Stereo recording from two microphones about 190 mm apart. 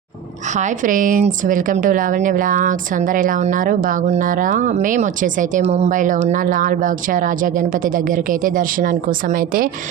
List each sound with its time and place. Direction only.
0.5 s a woman's voice: 40° right (ahead or behind)